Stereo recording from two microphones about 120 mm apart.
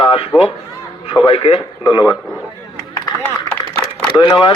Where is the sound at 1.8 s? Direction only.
35° left (ahead or behind).